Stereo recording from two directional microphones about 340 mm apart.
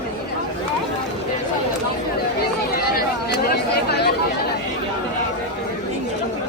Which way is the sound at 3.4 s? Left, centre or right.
Left.